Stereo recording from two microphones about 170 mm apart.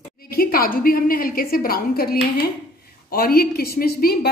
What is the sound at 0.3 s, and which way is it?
A woman's voice, 60° left (ahead or behind).